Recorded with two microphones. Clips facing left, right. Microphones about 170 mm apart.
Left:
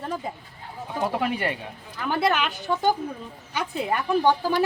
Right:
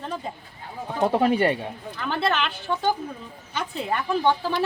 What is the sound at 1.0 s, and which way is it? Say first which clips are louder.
Speech: right 6 dB; 30° right (ahead or behind).